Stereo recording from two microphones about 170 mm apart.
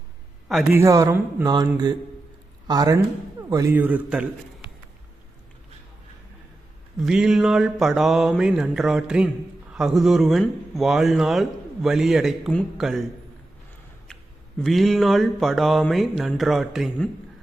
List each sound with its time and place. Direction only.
0.7 s speech: 20° right (ahead or behind)
2.6 s a man's voice: 20° right (ahead or behind)
7.0 s speech: 5° right (ahead or behind)
14.6 s speech: centre (ahead or behind)